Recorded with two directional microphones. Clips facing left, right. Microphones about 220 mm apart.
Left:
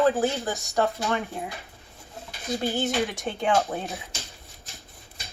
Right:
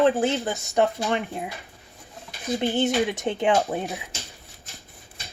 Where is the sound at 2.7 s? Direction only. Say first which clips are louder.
Right 5 dB; centre (ahead or behind).